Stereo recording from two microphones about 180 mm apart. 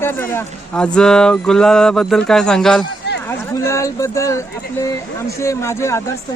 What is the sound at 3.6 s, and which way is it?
Speech, 15° left (ahead or behind).